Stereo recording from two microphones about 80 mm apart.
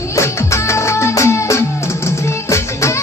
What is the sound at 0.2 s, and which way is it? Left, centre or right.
Music, left.